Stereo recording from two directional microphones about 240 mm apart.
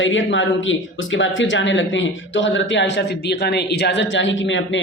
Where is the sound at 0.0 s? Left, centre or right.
Left.